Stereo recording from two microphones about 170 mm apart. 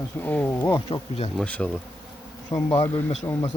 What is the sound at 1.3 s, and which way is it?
Speech, 10° left (ahead or behind).